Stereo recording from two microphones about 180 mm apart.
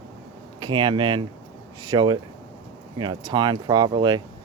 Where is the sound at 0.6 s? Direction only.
25° right (ahead or behind).